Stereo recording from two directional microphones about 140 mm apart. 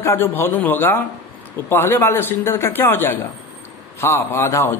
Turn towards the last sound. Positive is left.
turn(degrees=20)  # may be behind; listen again after turning